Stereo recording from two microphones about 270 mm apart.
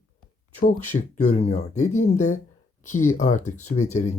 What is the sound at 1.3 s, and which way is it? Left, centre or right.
Speech, left.